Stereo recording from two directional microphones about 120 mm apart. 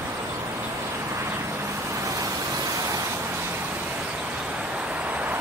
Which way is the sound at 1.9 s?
25° right (ahead or behind).